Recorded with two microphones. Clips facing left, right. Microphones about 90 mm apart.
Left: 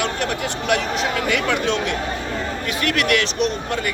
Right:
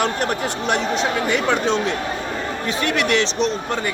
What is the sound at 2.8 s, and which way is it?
Speech, 25° right (ahead or behind).